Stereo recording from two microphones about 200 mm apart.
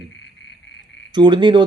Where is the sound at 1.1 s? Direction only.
20° right (ahead or behind).